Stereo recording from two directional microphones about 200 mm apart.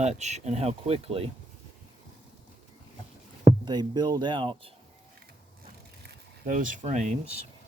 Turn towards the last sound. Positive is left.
turn(degrees=-35)  # may be behind; listen again after turning